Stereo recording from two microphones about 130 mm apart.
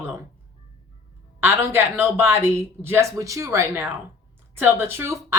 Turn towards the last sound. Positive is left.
turn(degrees=-20)  # may be behind; listen again after turning